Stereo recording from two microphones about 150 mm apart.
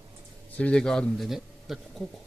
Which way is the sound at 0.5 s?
5° left (ahead or behind).